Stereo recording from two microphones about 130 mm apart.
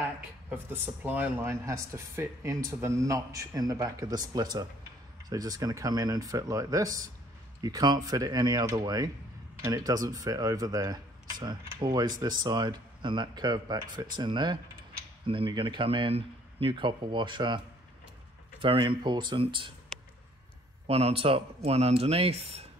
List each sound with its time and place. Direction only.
0.0 s speech: 15° right (ahead or behind); by 17.6 s 35° right (ahead or behind)
18.6 s speech: 40° right (ahead or behind)
20.8 s speech: 50° right (ahead or behind)